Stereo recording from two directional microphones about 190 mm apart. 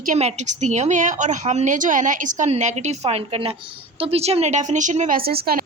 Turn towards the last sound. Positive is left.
turn(degrees=-55)  # may be behind; listen again after turning